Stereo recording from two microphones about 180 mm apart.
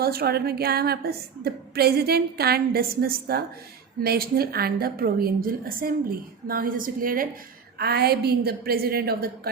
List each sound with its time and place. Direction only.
0.0 s a woman's voice: 60° right (ahead or behind)